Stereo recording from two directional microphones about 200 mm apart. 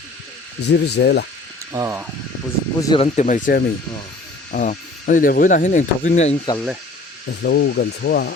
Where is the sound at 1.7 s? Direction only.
15° right (ahead or behind).